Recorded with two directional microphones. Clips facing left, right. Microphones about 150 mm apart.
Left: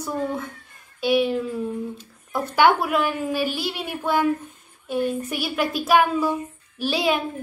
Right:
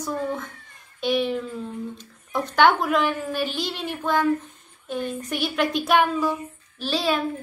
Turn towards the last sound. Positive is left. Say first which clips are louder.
# left 2 dB
turn(degrees=10)  # may be behind; listen again after turning